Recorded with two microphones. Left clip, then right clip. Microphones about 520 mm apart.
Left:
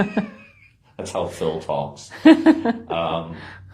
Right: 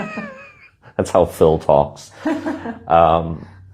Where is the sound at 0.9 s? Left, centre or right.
Right.